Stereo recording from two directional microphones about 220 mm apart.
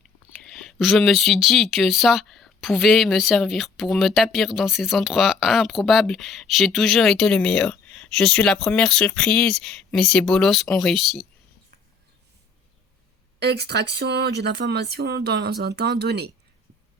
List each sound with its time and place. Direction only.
0.3 s speech: centre (ahead or behind)
13.4 s speech: 50° right (ahead or behind)